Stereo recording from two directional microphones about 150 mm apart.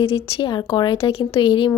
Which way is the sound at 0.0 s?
40° left (ahead or behind).